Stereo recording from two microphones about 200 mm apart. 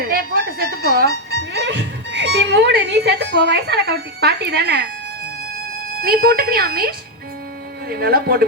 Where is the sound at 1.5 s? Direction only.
60° right (ahead or behind).